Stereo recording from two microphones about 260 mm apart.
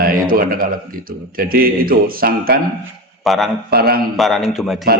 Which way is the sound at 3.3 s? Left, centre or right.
Centre.